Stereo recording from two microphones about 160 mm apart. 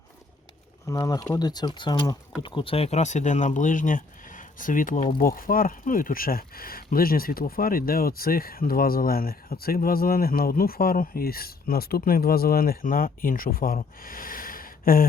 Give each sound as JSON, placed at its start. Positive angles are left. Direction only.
{"t": 0.9, "sound": "speech", "side_deg": 20}